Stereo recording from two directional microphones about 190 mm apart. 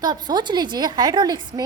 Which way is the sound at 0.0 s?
20° right (ahead or behind).